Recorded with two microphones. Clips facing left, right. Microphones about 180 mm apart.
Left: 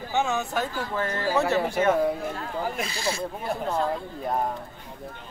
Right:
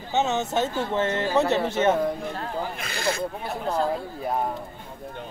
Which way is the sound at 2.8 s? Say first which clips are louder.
Right 1 dB; 60° right (ahead or behind).